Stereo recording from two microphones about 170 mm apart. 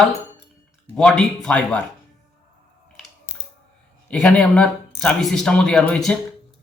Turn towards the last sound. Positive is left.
turn(degrees=5)  # may be behind; listen again after turning